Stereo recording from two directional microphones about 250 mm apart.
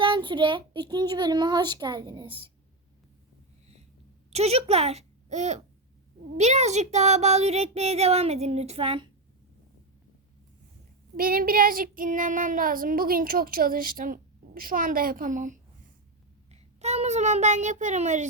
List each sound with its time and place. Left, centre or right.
0.0 s a child's voice: centre
4.3 s a child's voice: right
11.2 s child singing: right
16.5 s a child's voice: right